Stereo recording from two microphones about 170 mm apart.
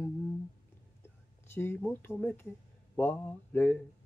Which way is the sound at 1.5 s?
15° left (ahead or behind).